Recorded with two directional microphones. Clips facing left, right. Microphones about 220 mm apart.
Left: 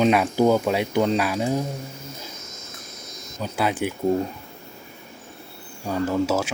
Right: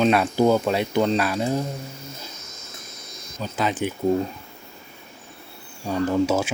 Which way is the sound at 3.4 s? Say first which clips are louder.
Left 1 dB; 10° left (ahead or behind).